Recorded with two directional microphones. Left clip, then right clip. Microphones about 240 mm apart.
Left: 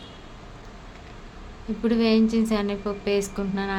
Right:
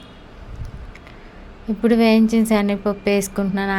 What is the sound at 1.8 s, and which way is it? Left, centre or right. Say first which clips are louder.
A woman's voice: right 6 dB; right.